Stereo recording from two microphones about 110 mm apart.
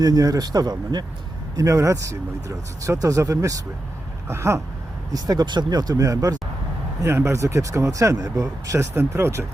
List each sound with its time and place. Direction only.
0.0 s speech: 35° right (ahead or behind)